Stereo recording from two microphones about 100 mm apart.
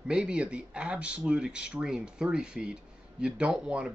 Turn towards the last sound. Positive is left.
turn(degrees=-10)  # may be behind; listen again after turning